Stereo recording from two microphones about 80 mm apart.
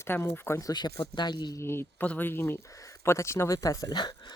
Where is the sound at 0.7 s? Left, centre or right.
Left.